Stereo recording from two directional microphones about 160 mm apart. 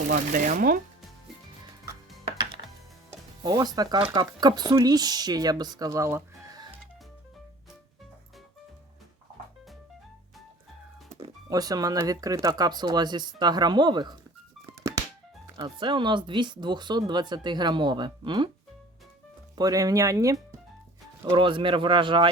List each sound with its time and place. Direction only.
0.1 s speech: 55° right (ahead or behind)
3.1 s music: 25° right (ahead or behind)
4.1 s speech: 25° right (ahead or behind)
11.4 s speech: 25° right (ahead or behind)
15.5 s speech: 30° right (ahead or behind)
19.5 s speech: 20° right (ahead or behind)
21.2 s speech: 30° right (ahead or behind)